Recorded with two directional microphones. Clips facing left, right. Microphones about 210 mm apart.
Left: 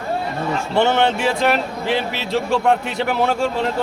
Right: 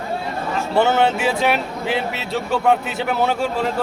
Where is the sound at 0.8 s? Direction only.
5° right (ahead or behind).